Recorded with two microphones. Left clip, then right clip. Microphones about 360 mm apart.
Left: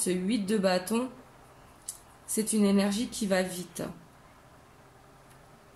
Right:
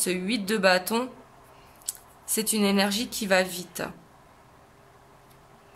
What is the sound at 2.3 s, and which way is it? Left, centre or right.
Speech, right.